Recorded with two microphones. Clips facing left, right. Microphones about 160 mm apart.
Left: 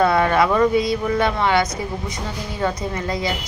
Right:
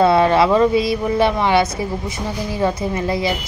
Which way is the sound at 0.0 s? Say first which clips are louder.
Right 3 dB; 25° right (ahead or behind).